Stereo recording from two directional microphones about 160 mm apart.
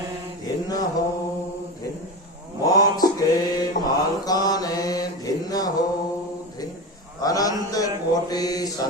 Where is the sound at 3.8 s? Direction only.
25° left (ahead or behind).